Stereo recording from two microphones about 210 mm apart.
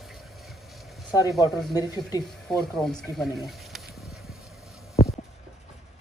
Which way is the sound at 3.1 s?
Centre (ahead or behind).